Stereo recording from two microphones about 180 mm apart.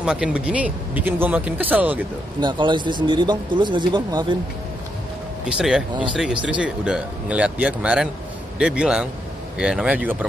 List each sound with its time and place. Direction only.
0.0 s speech: 5° right (ahead or behind)
2.4 s speech: 25° right (ahead or behind)
5.6 s a man's voice: 5° right (ahead or behind)